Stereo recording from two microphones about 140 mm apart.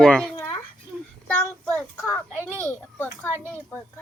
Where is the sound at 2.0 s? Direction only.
15° left (ahead or behind).